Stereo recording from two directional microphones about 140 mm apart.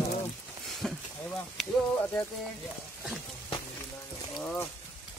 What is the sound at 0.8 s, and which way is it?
Speech, 5° left (ahead or behind).